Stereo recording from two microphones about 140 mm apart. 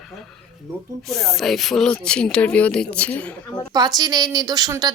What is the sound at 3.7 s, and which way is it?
A woman's voice, 30° right (ahead or behind).